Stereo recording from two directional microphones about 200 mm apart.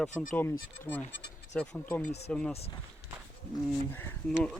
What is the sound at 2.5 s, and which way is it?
Speech, 30° left (ahead or behind).